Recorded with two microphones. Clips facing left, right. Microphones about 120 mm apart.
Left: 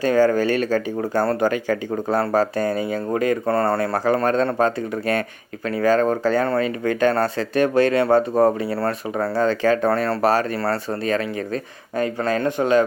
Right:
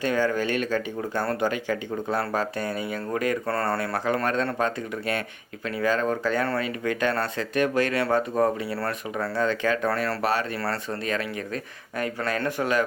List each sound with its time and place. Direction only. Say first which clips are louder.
0.0 s speech: left 7 dB; 40° left (ahead or behind)
3.8 s speech: left 6 dB; 35° left (ahead or behind)